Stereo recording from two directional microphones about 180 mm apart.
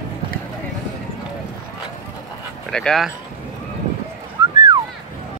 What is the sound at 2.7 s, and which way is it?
Speech, 5° left (ahead or behind).